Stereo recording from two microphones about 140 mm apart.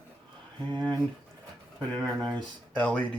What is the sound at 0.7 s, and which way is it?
Speech, 30° right (ahead or behind).